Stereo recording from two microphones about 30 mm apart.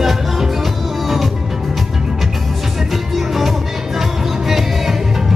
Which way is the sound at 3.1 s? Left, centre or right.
Centre.